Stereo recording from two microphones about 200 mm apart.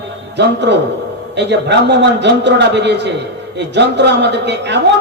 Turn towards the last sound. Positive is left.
turn(degrees=-60)  # may be behind; listen again after turning